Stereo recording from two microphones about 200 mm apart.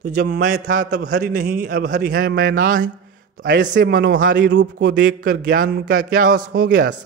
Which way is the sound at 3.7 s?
55° right (ahead or behind).